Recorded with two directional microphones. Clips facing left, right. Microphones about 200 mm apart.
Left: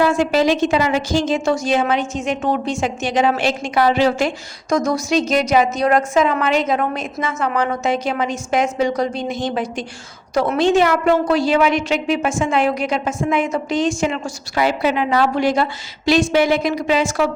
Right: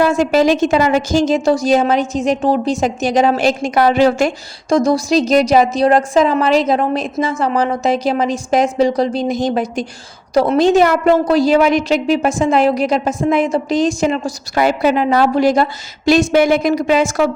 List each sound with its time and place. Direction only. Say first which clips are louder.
0.0 s a woman's voice: right 3 dB; 45° right (ahead or behind)
4.7 s a woman's voice: right 4 dB; 35° right (ahead or behind)